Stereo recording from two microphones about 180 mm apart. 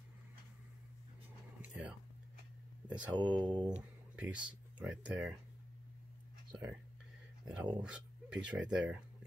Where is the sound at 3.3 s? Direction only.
25° right (ahead or behind).